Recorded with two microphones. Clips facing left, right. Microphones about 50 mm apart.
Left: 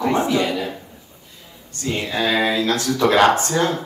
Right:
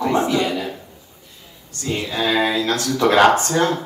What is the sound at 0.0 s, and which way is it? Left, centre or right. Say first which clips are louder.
Speech: even; left.